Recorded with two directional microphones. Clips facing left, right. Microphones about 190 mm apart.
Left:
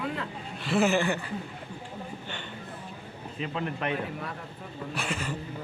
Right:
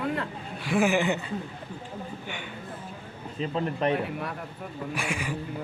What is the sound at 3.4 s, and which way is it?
Speech, 35° right (ahead or behind).